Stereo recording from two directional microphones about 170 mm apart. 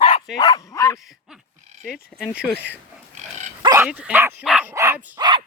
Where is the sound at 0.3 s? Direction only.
25° left (ahead or behind).